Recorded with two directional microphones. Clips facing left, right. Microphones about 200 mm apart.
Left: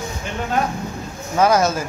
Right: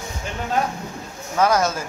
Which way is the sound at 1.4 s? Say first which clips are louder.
Left 3 dB; 10° left (ahead or behind).